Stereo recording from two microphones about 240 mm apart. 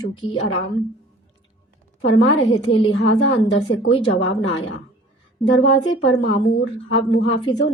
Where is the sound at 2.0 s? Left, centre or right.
Left.